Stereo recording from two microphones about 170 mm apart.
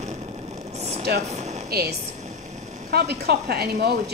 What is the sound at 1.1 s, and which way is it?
A woman's voice, 70° right (ahead or behind).